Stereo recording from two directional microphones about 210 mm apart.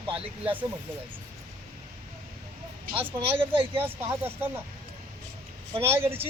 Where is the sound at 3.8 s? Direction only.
10° right (ahead or behind).